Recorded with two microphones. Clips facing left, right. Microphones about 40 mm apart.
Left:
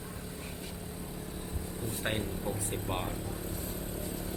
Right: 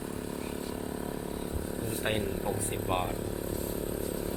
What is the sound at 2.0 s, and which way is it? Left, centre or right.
Speech, centre.